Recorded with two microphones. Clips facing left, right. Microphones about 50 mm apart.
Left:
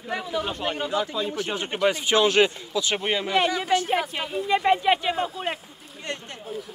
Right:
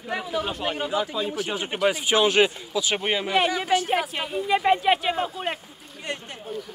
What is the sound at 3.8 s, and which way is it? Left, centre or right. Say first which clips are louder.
A man's voice: even; centre.